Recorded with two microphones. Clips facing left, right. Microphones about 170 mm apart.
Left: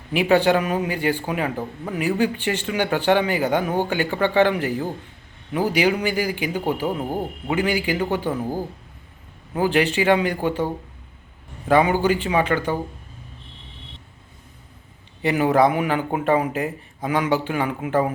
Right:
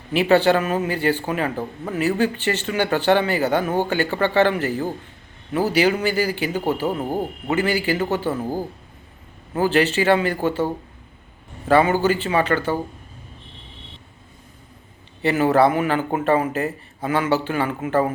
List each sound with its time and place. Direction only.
0.1 s speech: 10° left (ahead or behind)
7.0 s a man's voice: 10° right (ahead or behind)
7.4 s speech: 10° left (ahead or behind)
9.6 s speech: 15° left (ahead or behind)
11.7 s speech: 15° left (ahead or behind)
15.2 s speech: 10° left (ahead or behind)